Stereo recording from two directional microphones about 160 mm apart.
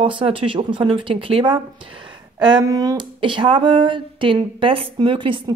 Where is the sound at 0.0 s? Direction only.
35° right (ahead or behind).